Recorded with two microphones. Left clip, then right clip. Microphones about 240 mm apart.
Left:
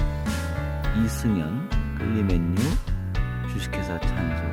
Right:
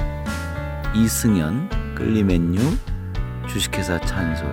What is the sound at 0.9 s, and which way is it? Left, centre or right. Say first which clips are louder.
Speech: right 7 dB; centre.